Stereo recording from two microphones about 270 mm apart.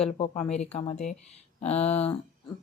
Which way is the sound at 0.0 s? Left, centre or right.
Left.